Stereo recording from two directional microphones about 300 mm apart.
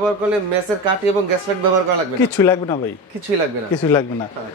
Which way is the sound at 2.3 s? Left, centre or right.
Centre.